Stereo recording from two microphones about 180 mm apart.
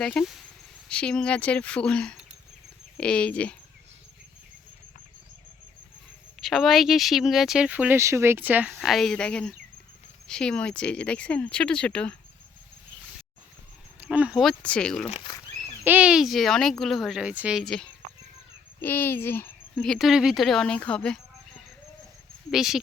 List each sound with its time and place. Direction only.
0.0 s speech: 5° left (ahead or behind)
6.4 s speech: centre (ahead or behind)
14.0 s speech: 5° right (ahead or behind)
15.1 s a sound: 25° left (ahead or behind)
15.8 s speech: 10° right (ahead or behind)
22.5 s speech: centre (ahead or behind)